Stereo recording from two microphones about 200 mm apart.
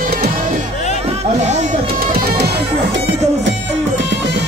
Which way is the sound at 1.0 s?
35° right (ahead or behind).